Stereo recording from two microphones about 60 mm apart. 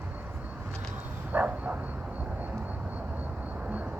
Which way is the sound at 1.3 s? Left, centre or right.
Right.